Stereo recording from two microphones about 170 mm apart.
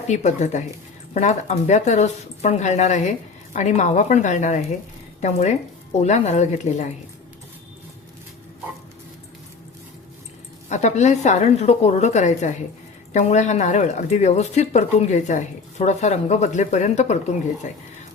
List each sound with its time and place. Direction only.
0.1 s speech: 45° left (ahead or behind)
10.7 s speech: 45° left (ahead or behind)